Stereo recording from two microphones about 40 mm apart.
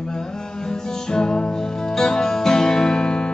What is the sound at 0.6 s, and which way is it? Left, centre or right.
Music, centre.